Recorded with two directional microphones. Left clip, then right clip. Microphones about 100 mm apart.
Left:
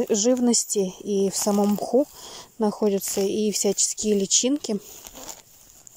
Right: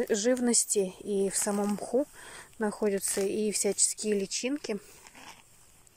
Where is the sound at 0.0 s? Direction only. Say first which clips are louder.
Left 6 dB; 25° left (ahead or behind); by 5.4 s 55° left (ahead or behind).